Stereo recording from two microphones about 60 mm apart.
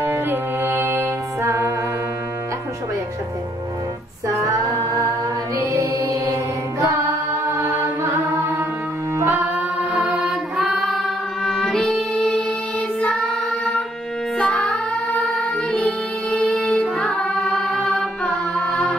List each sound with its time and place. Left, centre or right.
0.0 s music: right
4.5 s female singing: right
5.7 s music: right
7.4 s chant: right
10.0 s music: centre
13.0 s child singing: centre
14.4 s music: centre
15.8 s music: centre
17.2 s carnatic music: centre